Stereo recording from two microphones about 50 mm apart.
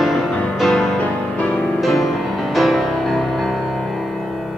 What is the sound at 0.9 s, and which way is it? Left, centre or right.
Music, left.